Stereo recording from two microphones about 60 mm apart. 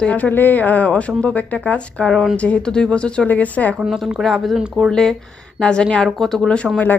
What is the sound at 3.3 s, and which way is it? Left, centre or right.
Speech, left.